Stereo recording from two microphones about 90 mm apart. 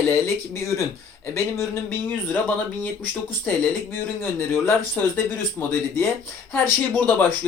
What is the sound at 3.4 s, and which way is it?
Speech, 20° left (ahead or behind).